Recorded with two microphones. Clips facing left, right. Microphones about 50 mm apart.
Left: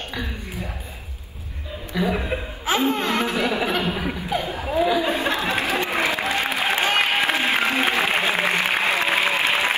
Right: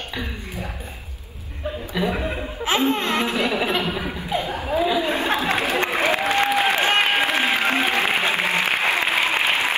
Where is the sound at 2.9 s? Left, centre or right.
Right.